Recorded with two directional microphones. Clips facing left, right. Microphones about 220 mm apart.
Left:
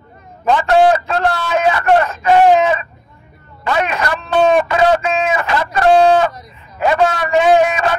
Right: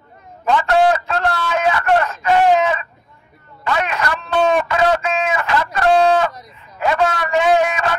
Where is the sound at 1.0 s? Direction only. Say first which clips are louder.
Left 3 dB; 25° left (ahead or behind).